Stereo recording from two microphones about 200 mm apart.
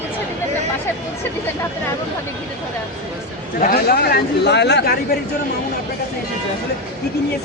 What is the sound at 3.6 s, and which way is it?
Speech, 50° left (ahead or behind).